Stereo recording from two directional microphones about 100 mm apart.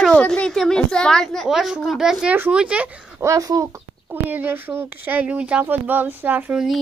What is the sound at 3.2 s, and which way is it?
Speech, 35° right (ahead or behind).